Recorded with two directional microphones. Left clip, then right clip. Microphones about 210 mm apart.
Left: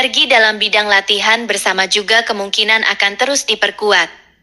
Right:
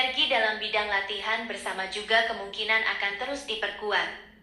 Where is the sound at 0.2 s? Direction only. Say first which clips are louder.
Left 14 dB; 50° left (ahead or behind).